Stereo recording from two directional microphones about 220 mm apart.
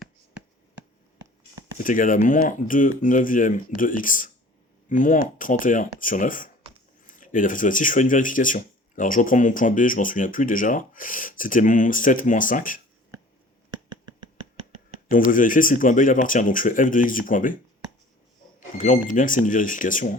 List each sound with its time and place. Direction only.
1.8 s speech: 40° left (ahead or behind)
13.7 s a sound: 20° right (ahead or behind)
15.3 s speech: 40° left (ahead or behind)
19.1 s speech: 35° left (ahead or behind)